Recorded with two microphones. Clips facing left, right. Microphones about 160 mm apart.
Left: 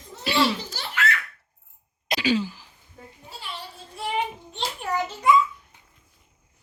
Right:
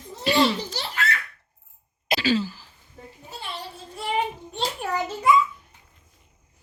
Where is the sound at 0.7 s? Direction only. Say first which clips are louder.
Left 1 dB; 35° right (ahead or behind).